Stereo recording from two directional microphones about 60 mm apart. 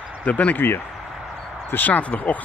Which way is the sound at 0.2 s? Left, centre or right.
Left.